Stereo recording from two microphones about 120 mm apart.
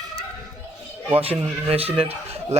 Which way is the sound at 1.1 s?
55° right (ahead or behind).